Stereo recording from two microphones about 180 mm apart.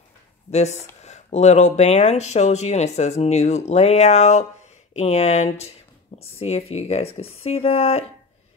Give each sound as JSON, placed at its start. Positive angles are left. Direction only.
{"t": 0.5, "sound": "speech", "side_deg": 40}